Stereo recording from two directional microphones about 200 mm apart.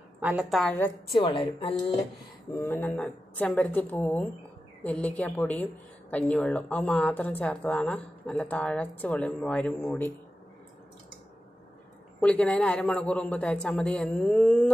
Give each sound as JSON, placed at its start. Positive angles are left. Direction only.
{"t": 0.2, "sound": "a man's voice", "side_deg": -5}
{"t": 1.1, "sound": "a woman's voice", "side_deg": 25}
{"t": 2.6, "sound": "speech", "side_deg": 10}
{"t": 12.2, "sound": "a man's voice", "side_deg": 5}